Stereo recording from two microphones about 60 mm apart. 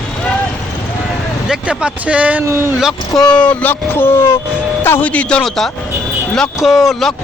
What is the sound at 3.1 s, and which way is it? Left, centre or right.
Speech, centre.